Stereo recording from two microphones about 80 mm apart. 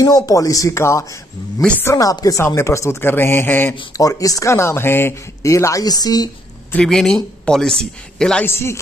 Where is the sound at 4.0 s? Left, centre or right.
Left.